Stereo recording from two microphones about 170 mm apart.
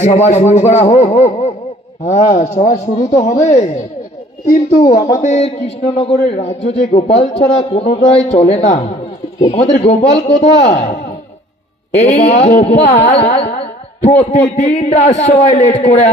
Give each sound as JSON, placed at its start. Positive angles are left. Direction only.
{"t": 0.0, "sound": "a man's voice", "side_deg": 40}
{"t": 4.6, "sound": "a man's voice", "side_deg": 40}
{"t": 5.2, "sound": "carnatic music", "side_deg": 45}
{"t": 5.9, "sound": "a man's voice", "side_deg": 35}
{"t": 12.7, "sound": "carnatic music", "side_deg": 45}
{"t": 13.6, "sound": "a sound", "side_deg": 35}
{"t": 14.6, "sound": "a man's voice", "side_deg": 40}